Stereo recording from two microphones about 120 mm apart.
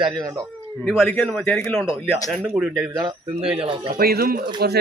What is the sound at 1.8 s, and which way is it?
Speech, 5° right (ahead or behind).